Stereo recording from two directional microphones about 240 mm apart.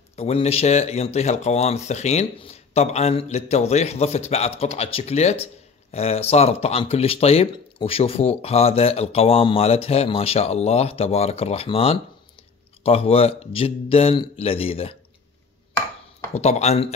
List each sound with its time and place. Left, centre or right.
0.1 s speech: left
16.3 s speech: left